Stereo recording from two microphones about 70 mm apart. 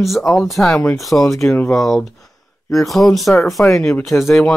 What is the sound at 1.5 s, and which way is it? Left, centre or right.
Speech, left.